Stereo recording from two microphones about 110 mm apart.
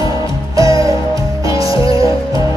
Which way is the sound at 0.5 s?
30° right (ahead or behind).